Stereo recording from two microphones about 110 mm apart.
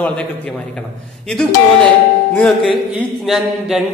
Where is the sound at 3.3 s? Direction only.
5° right (ahead or behind).